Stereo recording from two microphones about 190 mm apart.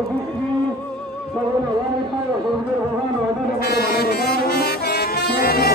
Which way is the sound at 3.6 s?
55° left (ahead or behind).